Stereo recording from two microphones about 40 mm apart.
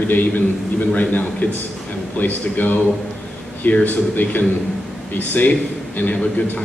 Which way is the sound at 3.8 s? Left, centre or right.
Left.